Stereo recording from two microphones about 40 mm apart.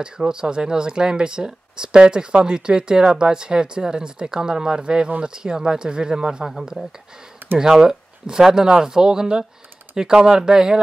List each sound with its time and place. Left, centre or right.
0.0 s speech: right
7.5 s speech: centre